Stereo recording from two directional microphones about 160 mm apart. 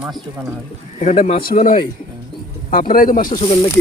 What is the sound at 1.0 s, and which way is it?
Speech, 45° left (ahead or behind).